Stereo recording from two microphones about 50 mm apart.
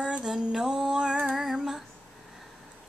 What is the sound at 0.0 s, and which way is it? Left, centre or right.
Female singing, centre.